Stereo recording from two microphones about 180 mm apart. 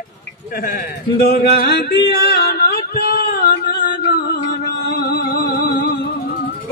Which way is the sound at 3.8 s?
65° left (ahead or behind).